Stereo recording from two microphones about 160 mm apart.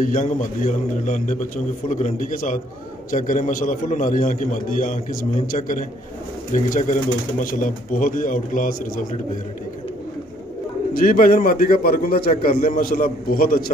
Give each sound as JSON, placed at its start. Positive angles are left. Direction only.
{"t": 0.0, "sound": "a man's voice", "side_deg": 55}
{"t": 10.9, "sound": "a man's voice", "side_deg": 65}